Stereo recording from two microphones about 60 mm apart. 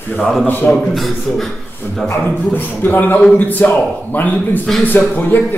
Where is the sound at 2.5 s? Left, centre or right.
Left.